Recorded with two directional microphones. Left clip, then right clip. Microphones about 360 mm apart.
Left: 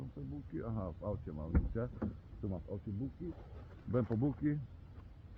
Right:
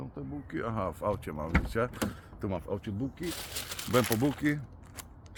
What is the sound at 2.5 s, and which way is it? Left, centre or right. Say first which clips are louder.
Speech: right 10 dB; right.